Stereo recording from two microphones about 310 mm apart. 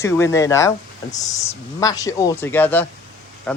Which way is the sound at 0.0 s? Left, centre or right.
Centre.